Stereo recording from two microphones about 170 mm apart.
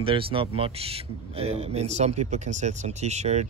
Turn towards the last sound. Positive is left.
turn(degrees=-40)  # may be behind; listen again after turning